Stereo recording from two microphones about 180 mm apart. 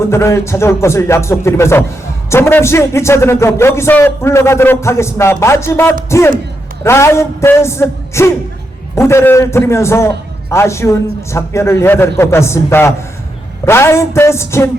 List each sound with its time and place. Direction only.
0.1 s a man's voice: 15° left (ahead or behind)